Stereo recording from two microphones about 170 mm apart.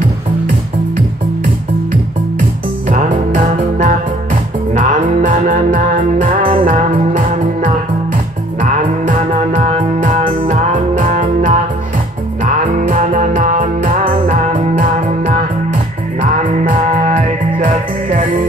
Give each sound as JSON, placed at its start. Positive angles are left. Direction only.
{"t": 2.9, "sound": "music", "side_deg": -50}
{"t": 5.1, "sound": "music", "side_deg": -45}
{"t": 12.7, "sound": "music", "side_deg": -50}